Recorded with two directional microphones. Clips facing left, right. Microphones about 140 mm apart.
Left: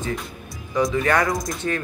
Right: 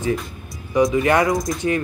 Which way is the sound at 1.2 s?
Centre (ahead or behind).